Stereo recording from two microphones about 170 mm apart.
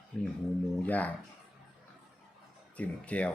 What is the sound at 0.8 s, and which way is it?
Speech, 10° left (ahead or behind).